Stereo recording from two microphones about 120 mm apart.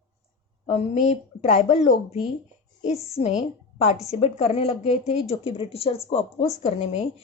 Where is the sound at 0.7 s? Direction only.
65° left (ahead or behind); by 1.9 s 80° left.